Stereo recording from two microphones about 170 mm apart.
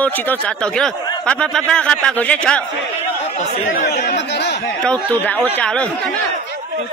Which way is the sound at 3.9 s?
80° left.